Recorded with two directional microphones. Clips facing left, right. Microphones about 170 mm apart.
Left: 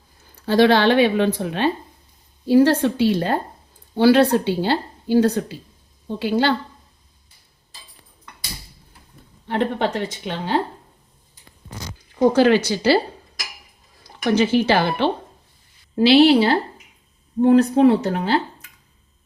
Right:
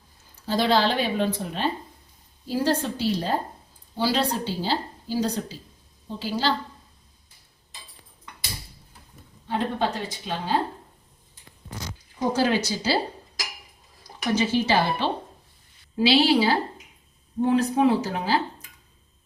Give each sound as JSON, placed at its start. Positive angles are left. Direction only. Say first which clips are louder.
{"t": 0.3, "sound": "speech", "louder": "left 7 dB", "side_deg": 70}
{"t": 9.5, "sound": "speech", "louder": "left 4 dB", "side_deg": 70}
{"t": 12.3, "sound": "speech", "louder": "left 5 dB", "side_deg": 65}
{"t": 14.3, "sound": "speech", "louder": "left 5 dB", "side_deg": 65}